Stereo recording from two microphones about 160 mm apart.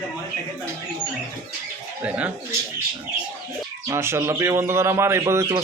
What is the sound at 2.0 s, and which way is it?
Speech, 5° right (ahead or behind).